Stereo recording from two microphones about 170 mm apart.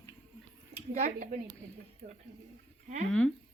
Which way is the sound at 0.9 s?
40° right (ahead or behind).